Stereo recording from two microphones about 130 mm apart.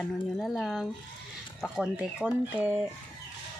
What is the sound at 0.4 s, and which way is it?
Speech, centre (ahead or behind).